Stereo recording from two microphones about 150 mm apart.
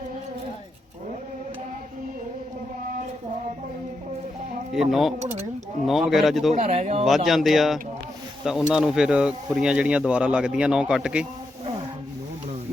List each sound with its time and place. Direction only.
4.7 s speech: centre (ahead or behind)
6.5 s speech: 50° right (ahead or behind)
7.0 s speech: centre (ahead or behind)